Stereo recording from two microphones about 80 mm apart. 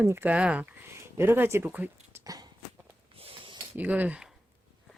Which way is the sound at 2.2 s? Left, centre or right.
Right.